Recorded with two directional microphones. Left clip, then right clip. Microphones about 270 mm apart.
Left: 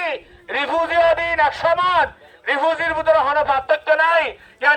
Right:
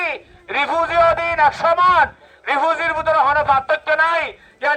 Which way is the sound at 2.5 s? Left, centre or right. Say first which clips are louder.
Right 1 dB; centre.